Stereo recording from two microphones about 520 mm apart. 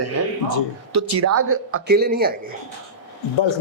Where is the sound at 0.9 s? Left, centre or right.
Right.